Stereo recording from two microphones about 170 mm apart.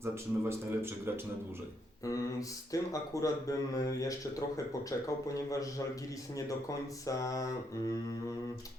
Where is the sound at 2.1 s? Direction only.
20° left (ahead or behind).